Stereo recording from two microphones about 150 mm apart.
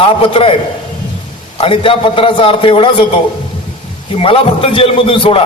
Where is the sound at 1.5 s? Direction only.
35° left (ahead or behind).